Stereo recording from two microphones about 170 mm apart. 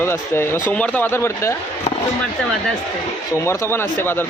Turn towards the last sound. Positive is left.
turn(degrees=15)  # may be behind; listen again after turning